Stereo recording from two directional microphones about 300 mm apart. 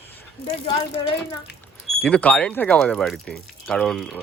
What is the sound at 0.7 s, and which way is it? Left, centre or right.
Speech, centre.